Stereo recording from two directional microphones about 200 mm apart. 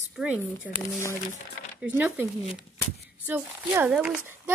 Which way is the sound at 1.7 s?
10° right (ahead or behind).